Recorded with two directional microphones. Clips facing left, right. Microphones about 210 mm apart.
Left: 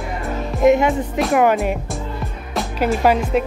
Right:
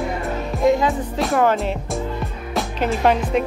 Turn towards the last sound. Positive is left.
turn(degrees=5)  # may be behind; listen again after turning